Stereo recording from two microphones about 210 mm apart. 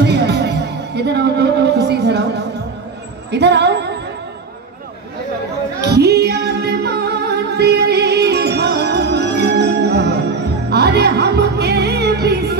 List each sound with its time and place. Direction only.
0.0 s music: 50° right (ahead or behind)
3.3 s a sound: 55° right (ahead or behind)
5.8 s music: 50° right (ahead or behind)